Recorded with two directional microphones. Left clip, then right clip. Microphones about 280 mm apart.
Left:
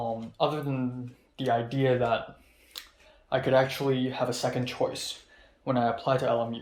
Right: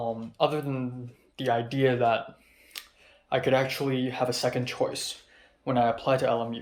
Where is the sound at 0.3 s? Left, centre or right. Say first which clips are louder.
Right 2 dB; centre.